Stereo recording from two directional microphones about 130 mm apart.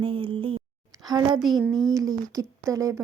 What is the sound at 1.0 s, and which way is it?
A woman's voice, 30° right (ahead or behind).